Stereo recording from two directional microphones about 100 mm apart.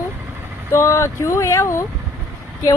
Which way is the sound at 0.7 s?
30° left (ahead or behind).